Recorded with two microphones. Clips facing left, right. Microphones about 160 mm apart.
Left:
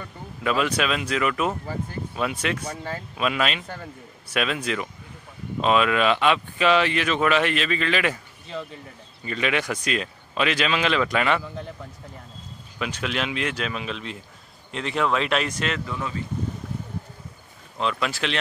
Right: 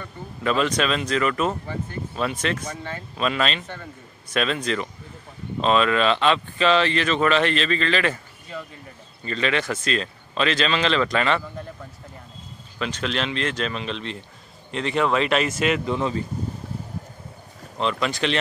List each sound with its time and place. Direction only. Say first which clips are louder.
0.4 s speech: right 1 dB; 5° left (ahead or behind)
9.2 s speech: right 1 dB; 10° left (ahead or behind)
12.7 s speech: right 1 dB; 10° left (ahead or behind); by 15.8 s 5° right (ahead or behind)
15.8 s speech: right 6 dB; 25° right (ahead or behind)
17.7 s speech: right 2 dB; centre (ahead or behind)